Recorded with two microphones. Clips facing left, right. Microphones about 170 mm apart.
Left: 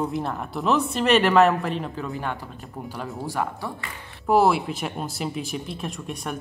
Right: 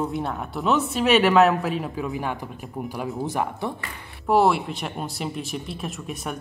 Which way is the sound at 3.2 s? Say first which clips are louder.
Even; 20° right (ahead or behind).